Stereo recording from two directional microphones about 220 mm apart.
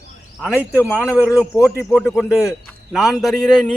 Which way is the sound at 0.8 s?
5° left (ahead or behind).